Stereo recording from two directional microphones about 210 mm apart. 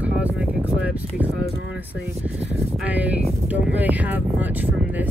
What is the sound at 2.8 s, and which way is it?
Speech, 5° right (ahead or behind).